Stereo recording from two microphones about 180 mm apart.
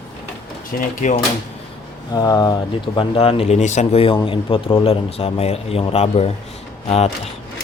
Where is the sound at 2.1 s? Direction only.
20° left (ahead or behind).